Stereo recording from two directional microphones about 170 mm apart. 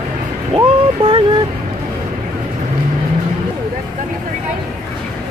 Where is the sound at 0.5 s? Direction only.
35° right (ahead or behind).